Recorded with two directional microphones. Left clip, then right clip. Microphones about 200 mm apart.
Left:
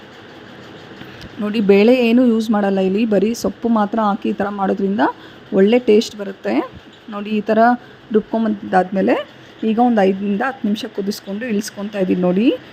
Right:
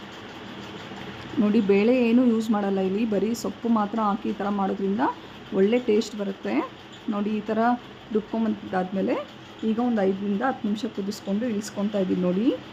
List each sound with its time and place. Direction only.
1.5 s speech: 30° left (ahead or behind)